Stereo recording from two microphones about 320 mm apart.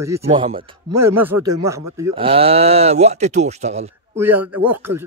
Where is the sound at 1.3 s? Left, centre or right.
Right.